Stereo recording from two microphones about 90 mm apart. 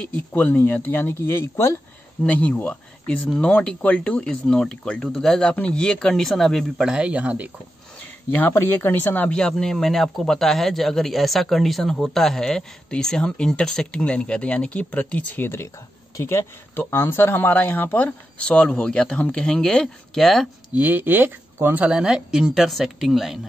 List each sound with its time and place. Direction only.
0.3 s speech: 20° left (ahead or behind)
2.2 s speech: 15° left (ahead or behind); by 7.5 s 15° right (ahead or behind)
8.0 s speech: 20° left (ahead or behind)
18.4 s speech: 10° left (ahead or behind)
20.7 s speech: 20° right (ahead or behind); by 23.4 s centre (ahead or behind)